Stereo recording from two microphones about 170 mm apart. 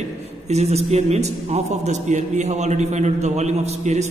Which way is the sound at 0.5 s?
40° right (ahead or behind).